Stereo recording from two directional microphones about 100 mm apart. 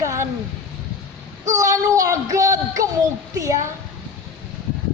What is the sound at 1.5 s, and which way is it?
Music, 35° right (ahead or behind).